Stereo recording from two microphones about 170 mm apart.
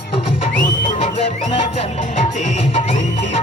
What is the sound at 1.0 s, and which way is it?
Music, 35° left (ahead or behind).